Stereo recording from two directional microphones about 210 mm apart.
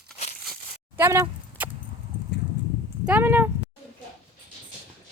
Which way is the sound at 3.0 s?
10° right (ahead or behind).